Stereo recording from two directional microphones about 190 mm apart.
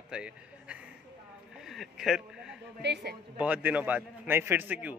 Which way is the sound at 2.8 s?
60° right (ahead or behind).